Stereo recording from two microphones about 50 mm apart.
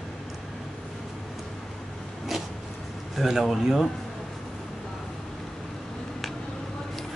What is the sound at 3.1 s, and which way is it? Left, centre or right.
Speech, centre.